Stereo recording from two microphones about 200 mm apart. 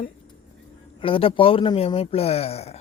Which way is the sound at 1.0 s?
25° left (ahead or behind).